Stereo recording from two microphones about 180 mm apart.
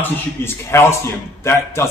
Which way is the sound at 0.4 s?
15° left (ahead or behind).